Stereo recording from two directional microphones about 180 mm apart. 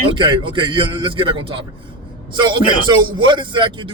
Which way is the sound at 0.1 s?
25° right (ahead or behind).